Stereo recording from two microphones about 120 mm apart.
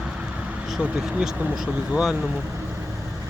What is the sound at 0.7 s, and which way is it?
Speech, 10° right (ahead or behind).